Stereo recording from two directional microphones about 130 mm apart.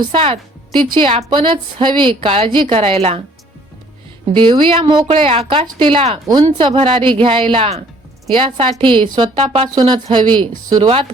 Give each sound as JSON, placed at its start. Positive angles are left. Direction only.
{"t": 0.0, "sound": "a woman's voice", "side_deg": -45}
{"t": 4.4, "sound": "a woman's voice", "side_deg": -40}